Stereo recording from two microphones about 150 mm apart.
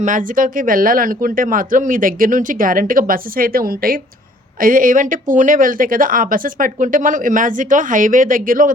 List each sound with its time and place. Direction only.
0.0 s speech: 60° right (ahead or behind); by 4.0 s 80° right
4.6 s speech: 65° right (ahead or behind)